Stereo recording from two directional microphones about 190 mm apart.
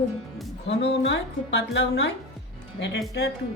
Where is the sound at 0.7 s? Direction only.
65° left (ahead or behind).